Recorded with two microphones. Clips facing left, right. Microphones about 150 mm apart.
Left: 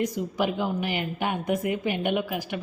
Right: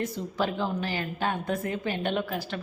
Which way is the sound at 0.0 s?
15° left (ahead or behind).